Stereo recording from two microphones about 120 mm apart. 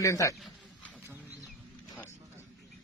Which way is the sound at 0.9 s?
15° right (ahead or behind).